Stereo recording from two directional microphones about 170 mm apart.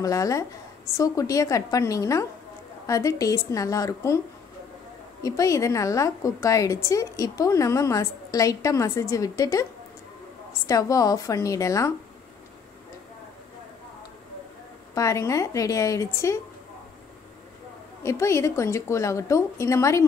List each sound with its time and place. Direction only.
0.0 s a woman's voice: 20° left (ahead or behind)
5.2 s a woman's voice: 20° left (ahead or behind)
10.7 s a woman's voice: 20° left (ahead or behind)
15.0 s a woman's voice: 20° left (ahead or behind)
18.0 s a woman's voice: 15° left (ahead or behind)